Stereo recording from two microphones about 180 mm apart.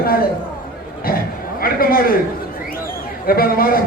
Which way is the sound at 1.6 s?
55° left (ahead or behind).